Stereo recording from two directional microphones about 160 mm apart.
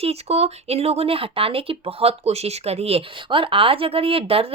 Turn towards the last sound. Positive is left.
turn(degrees=-35)  # may be behind; listen again after turning